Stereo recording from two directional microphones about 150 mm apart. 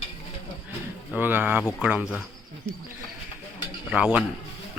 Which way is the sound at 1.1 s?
10° right (ahead or behind).